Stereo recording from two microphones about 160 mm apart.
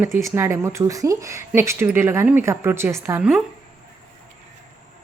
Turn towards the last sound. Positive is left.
turn(degrees=-5)  # may be behind; listen again after turning